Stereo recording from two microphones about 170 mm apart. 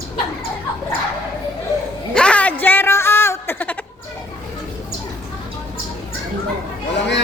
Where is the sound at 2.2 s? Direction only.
5° left (ahead or behind).